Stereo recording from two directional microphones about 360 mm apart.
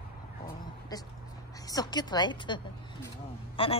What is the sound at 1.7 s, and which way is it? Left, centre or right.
A woman's voice, centre.